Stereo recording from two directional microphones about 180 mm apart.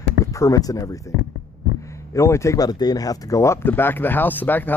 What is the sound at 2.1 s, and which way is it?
Speech, 15° left (ahead or behind).